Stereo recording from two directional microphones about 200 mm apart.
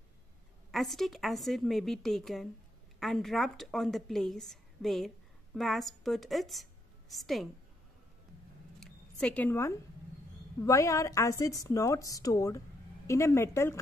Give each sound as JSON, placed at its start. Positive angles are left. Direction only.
{"t": 0.7, "sound": "a woman's voice", "side_deg": 0}
{"t": 8.7, "sound": "a sound", "side_deg": 5}
{"t": 10.6, "sound": "a woman's voice", "side_deg": 15}